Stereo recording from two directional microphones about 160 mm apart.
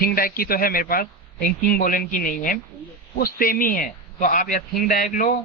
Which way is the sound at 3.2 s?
65° left (ahead or behind).